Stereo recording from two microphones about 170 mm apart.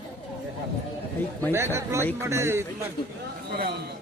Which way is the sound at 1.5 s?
15° right (ahead or behind).